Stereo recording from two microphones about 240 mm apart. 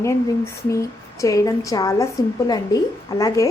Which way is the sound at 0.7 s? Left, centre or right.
Centre.